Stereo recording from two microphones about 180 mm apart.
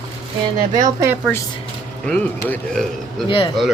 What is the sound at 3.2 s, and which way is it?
Speech, 30° left (ahead or behind).